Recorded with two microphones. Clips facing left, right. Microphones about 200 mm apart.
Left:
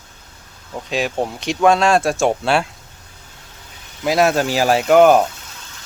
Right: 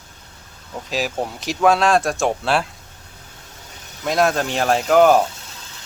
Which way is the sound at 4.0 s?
5° left (ahead or behind).